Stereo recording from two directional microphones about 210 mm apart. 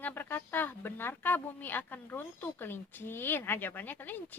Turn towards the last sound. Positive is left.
turn(degrees=10)  # may be behind; listen again after turning